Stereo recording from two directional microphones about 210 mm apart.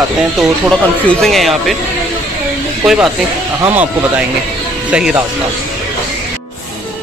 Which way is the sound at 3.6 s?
10° right (ahead or behind).